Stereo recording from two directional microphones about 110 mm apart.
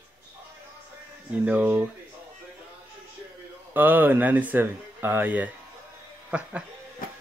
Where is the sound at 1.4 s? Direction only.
10° right (ahead or behind).